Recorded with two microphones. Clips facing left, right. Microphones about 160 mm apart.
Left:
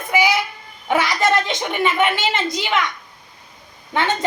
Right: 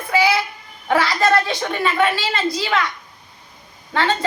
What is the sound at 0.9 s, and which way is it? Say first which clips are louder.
A child's voice: right 1 dB; 20° left (ahead or behind).